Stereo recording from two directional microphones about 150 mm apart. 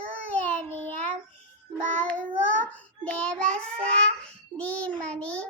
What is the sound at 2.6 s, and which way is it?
Child singing, 10° left (ahead or behind).